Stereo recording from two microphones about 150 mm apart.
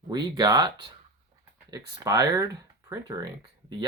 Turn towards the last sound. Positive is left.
turn(degrees=-25)  # may be behind; listen again after turning